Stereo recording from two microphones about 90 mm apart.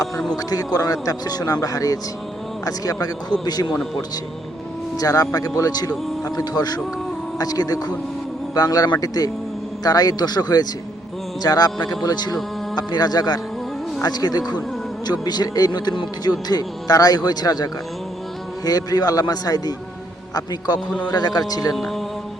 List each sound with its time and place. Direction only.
0.3 s speech: 45° left (ahead or behind)
3.7 s speech: 5° left (ahead or behind)
4.9 s speech: 40° left (ahead or behind)
20.7 s speech: 10° left (ahead or behind)
21.1 s speech: 50° left (ahead or behind)
21.8 s speech: 5° left (ahead or behind)